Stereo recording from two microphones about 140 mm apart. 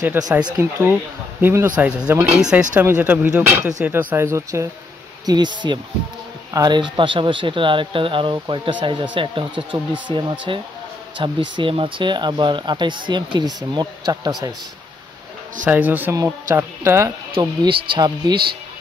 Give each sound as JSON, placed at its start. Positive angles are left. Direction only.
{"t": 0.2, "sound": "speech", "side_deg": -15}
{"t": 5.2, "sound": "speech", "side_deg": -30}
{"t": 15.6, "sound": "speech", "side_deg": -10}
{"t": 17.4, "sound": "speech", "side_deg": -30}